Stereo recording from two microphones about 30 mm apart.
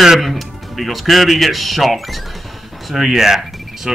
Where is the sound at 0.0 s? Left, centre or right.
Centre.